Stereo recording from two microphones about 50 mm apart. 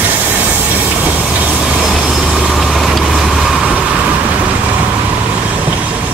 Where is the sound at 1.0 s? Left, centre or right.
Right.